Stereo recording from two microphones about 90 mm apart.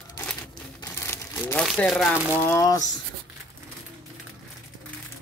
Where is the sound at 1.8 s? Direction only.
10° left (ahead or behind).